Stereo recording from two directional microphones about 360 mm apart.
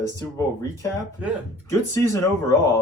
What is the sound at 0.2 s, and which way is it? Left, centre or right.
Speech, centre.